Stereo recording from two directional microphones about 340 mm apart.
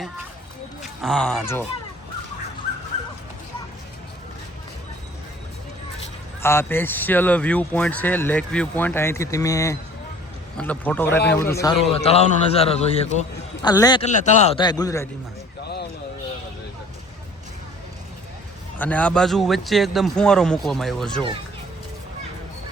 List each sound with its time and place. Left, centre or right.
0.8 s speech: centre
6.4 s speech: centre
11.6 s a man's voice: centre
15.6 s a sound: left
18.8 s speech: centre